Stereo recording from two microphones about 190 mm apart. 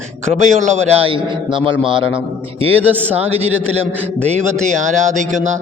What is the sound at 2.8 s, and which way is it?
Speech, 10° right (ahead or behind).